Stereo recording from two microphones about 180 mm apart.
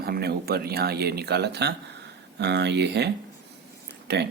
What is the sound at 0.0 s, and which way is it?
Speech, 60° right (ahead or behind).